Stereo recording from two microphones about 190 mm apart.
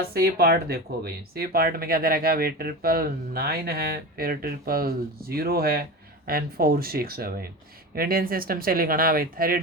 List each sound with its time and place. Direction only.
0.1 s speech: 55° right (ahead or behind)